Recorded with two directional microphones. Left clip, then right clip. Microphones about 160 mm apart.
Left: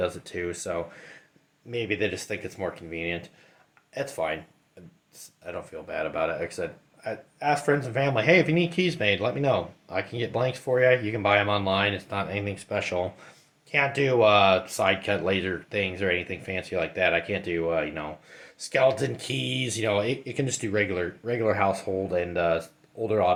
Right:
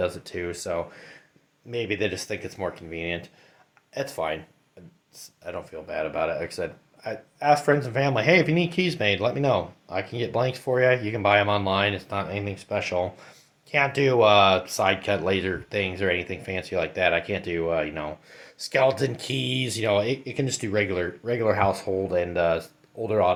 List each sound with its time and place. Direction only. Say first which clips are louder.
0.0 s speech: right 1 dB; 15° right (ahead or behind)
5.4 s speech: right 1 dB; 20° right (ahead or behind)